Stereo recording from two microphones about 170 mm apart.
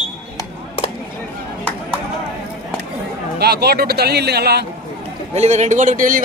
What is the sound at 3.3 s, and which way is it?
A man's voice, 70° right (ahead or behind).